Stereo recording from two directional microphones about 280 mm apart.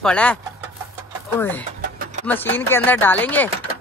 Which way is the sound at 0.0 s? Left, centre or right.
Centre.